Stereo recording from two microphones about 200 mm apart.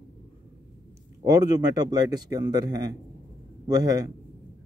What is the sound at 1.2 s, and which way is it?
Speech, 20° right (ahead or behind).